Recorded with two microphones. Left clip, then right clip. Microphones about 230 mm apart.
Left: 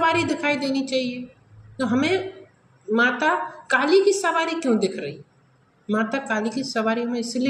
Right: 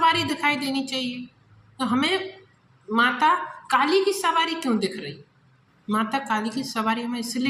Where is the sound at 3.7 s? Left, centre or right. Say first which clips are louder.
Left 3 dB; right.